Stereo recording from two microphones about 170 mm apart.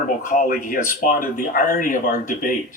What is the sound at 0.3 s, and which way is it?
Speech, 50° left (ahead or behind).